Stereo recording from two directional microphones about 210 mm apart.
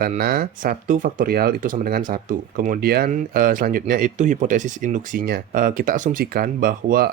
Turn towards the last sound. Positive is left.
turn(degrees=-45)  # may be behind; listen again after turning